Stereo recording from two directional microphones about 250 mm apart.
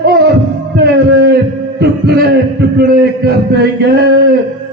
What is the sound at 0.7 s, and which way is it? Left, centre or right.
A man's voice, right.